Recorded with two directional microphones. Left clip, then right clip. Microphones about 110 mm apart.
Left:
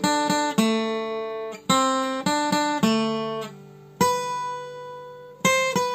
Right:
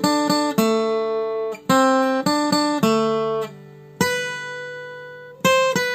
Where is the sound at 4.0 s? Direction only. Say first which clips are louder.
Even; 20° right (ahead or behind).